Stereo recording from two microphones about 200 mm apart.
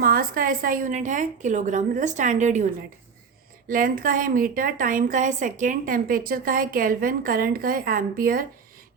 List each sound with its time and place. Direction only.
0.0 s a woman's voice: 45° right (ahead or behind)
3.7 s a woman's voice: 45° right (ahead or behind)